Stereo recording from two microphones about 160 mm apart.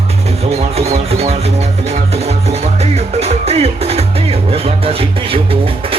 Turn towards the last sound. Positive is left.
turn(degrees=-35)  # may be behind; listen again after turning